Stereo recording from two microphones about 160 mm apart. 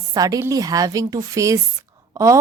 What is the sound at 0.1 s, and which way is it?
A woman's voice, 20° right (ahead or behind).